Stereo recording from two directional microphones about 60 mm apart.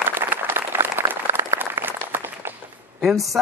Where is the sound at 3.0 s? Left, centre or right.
Centre.